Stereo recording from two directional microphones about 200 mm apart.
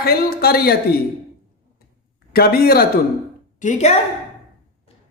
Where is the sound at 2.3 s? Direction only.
50° left (ahead or behind).